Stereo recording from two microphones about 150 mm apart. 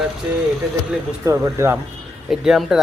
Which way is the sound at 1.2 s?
20° right (ahead or behind).